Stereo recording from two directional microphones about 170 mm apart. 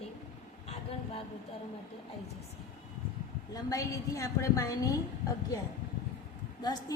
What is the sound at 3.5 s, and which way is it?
A woman's voice, 20° left (ahead or behind).